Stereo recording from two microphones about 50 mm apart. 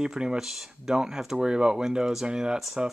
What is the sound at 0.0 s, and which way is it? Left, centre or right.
Speech, centre.